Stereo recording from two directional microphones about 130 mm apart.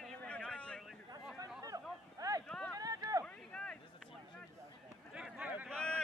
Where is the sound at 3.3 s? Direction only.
5° left (ahead or behind).